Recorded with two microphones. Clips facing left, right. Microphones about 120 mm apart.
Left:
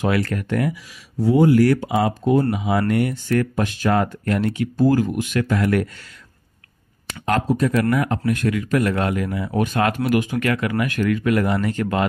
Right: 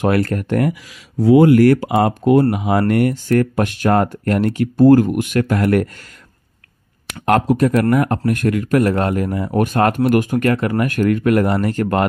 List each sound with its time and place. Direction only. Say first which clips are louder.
0.0 s speech: right 4 dB; 55° right (ahead or behind)
0.3 s speech: right 4 dB; 40° right (ahead or behind)
1.2 s speech: right 5 dB; 80° right; by 1.8 s 60° right (ahead or behind)
1.8 s speech: right 4 dB; 75° right (ahead or behind); by 3.4 s 45° right (ahead or behind)
3.5 s speech: right 4 dB; 60° right (ahead or behind)
7.1 s speech: right 5 dB; 60° right (ahead or behind)
7.8 s speech: right 4 dB; 45° right (ahead or behind)
10.5 s speech: right 4 dB; 35° right (ahead or behind)
10.8 s speech: right 4 dB; 50° right (ahead or behind)